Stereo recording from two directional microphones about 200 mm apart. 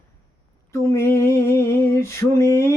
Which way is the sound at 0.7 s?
15° left (ahead or behind).